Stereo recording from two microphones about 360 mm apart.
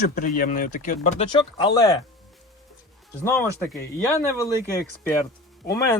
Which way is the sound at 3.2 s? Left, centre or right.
Centre.